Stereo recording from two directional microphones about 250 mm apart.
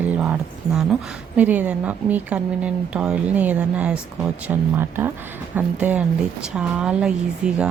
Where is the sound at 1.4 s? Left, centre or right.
Centre.